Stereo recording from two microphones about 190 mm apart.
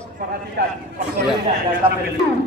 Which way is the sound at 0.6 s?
55° right (ahead or behind).